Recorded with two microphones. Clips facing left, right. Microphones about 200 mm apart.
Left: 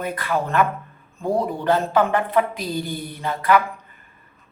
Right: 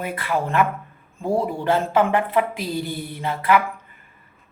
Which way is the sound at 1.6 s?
25° right (ahead or behind).